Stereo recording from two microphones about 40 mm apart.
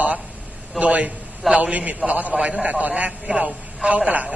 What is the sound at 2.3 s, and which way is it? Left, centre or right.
Speech, right.